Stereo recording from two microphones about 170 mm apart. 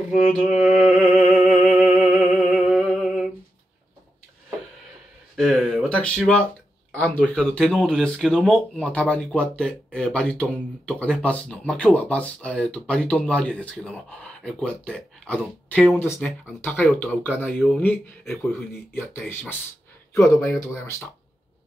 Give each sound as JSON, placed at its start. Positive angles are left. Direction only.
{"t": 0.1, "sound": "speech", "side_deg": 0}
{"t": 0.6, "sound": "a sound", "side_deg": 45}
{"t": 1.5, "sound": "music", "side_deg": -10}
{"t": 5.3, "sound": "a sound", "side_deg": 5}
{"t": 7.0, "sound": "speech", "side_deg": 5}
{"t": 20.5, "sound": "speech", "side_deg": 15}